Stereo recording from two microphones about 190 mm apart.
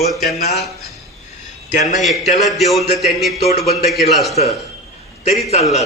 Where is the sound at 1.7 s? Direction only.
40° left (ahead or behind).